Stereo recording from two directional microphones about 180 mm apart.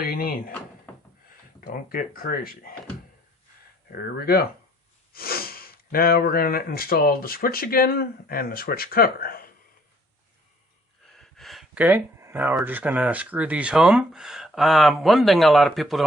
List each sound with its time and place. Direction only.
0.0 s speech: 55° left (ahead or behind)
1.6 s speech: 50° left (ahead or behind)
3.9 s speech: 55° left (ahead or behind)
11.0 s speech: centre (ahead or behind)